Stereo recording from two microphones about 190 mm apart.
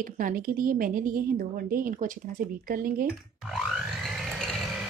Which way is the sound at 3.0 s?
Centre (ahead or behind).